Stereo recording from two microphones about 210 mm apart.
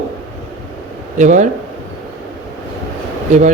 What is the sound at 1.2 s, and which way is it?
Speech, 35° right (ahead or behind).